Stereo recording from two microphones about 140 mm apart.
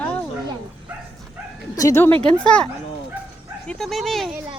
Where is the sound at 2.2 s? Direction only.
5° left (ahead or behind).